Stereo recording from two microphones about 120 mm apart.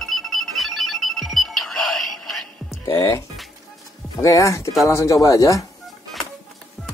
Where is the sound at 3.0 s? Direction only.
20° left (ahead or behind).